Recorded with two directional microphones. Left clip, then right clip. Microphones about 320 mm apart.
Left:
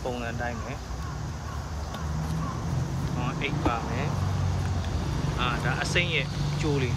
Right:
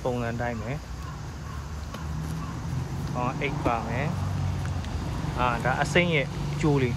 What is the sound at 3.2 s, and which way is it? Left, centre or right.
Speech, centre.